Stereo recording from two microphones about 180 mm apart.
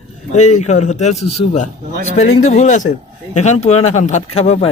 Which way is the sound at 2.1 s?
40° left (ahead or behind).